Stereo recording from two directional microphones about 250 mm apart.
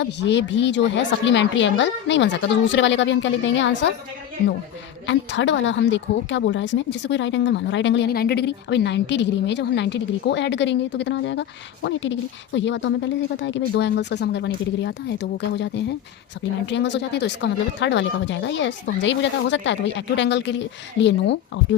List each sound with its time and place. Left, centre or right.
0.0 s a woman's voice: left
5.0 s a woman's voice: left